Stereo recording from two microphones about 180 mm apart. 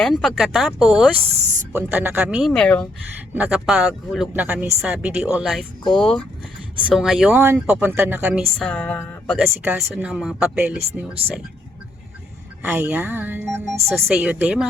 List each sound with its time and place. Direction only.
0.0 s speech: centre (ahead or behind)
2.5 s a sound: 5° left (ahead or behind)
3.3 s speech: 5° right (ahead or behind)
8.5 s a sound: 5° left (ahead or behind)
9.6 s speech: 5° right (ahead or behind)
12.7 s speech: 5° right (ahead or behind)